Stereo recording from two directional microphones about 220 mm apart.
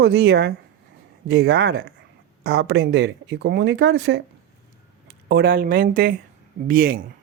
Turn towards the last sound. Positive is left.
turn(degrees=-40)  # may be behind; listen again after turning